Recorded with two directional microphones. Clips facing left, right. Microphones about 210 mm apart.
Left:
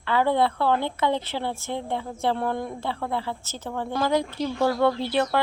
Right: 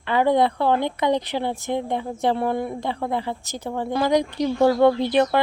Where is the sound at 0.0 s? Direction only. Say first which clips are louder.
Right 3 dB; 15° right (ahead or behind).